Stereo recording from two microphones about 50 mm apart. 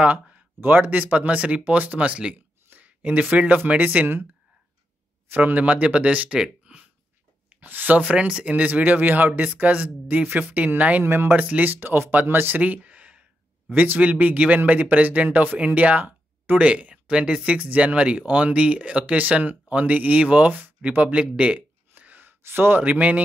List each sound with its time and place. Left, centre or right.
0.0 s a sound: right
0.6 s speech: right
2.3 s speech: right
5.3 s speech: right
6.4 s a sound: right
7.4 s speech: right
8.0 s speech: right
11.1 s speech: right
11.3 s speech: right
21.0 s a sound: right
22.8 s speech: right